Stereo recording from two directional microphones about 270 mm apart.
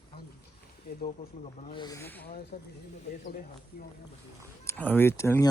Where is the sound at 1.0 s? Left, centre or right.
Left.